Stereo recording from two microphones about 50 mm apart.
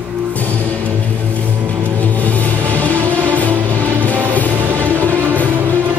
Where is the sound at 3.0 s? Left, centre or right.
Left.